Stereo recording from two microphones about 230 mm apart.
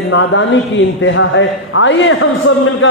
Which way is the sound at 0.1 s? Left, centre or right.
Left.